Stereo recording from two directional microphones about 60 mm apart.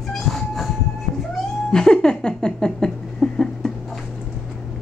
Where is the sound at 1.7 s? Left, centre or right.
Centre.